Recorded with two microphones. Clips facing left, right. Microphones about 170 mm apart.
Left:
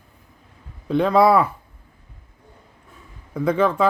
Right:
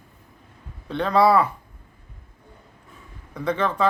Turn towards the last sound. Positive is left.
turn(degrees=10)  # may be behind; listen again after turning